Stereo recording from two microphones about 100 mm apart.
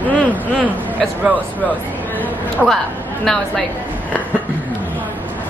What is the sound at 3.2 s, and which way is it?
Speech, 15° left (ahead or behind).